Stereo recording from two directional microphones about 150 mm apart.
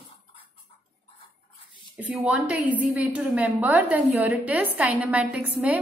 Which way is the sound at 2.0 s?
10° right (ahead or behind).